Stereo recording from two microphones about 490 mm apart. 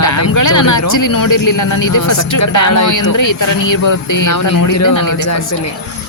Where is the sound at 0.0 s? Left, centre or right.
Left.